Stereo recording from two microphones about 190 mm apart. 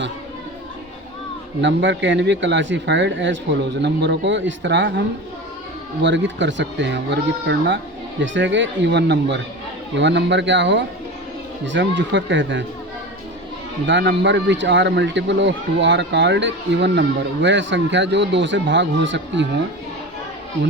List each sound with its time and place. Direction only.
1.6 s speech: 70° right (ahead or behind)
13.8 s speech: 70° right (ahead or behind)